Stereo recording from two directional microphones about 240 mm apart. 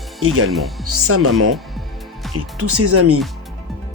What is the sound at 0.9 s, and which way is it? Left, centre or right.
Speech, right.